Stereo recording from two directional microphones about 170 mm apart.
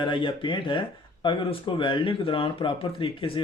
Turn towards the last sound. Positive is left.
turn(degrees=30)  # may be behind; listen again after turning